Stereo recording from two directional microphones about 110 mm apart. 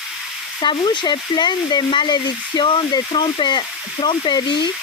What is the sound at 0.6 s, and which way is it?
Speech, 45° left (ahead or behind).